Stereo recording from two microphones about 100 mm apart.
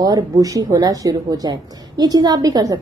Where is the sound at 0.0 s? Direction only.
40° right (ahead or behind).